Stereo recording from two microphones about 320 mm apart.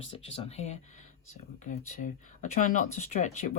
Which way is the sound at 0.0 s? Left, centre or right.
Centre.